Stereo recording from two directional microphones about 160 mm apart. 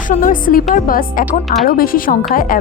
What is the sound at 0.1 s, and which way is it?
A woman's voice, 55° left (ahead or behind).